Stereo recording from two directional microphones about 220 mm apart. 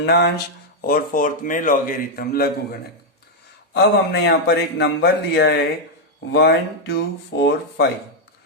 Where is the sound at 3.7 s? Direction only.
50° left (ahead or behind).